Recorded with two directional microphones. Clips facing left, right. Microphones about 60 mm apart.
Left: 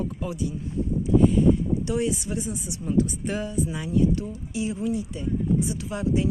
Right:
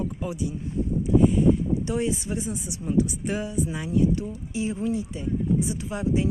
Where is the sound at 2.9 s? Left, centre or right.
Centre.